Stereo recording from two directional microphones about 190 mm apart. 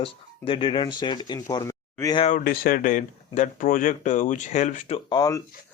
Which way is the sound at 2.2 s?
45° left (ahead or behind).